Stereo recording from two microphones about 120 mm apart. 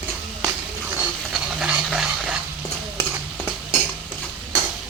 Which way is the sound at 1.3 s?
5° right (ahead or behind).